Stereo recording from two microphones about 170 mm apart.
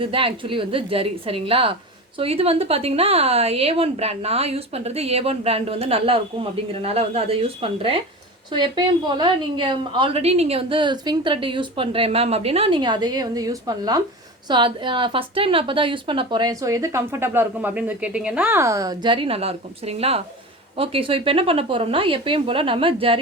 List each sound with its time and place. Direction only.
0.0 s a woman's voice: 30° right (ahead or behind)